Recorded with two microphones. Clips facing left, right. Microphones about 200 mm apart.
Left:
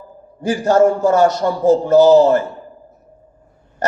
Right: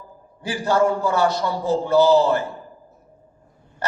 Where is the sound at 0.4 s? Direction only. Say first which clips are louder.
Left 6 dB; 45° left (ahead or behind).